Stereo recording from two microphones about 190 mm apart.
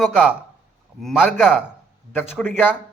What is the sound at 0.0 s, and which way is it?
A man's voice, centre (ahead or behind).